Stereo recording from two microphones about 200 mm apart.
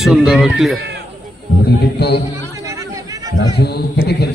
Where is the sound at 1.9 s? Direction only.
55° left (ahead or behind).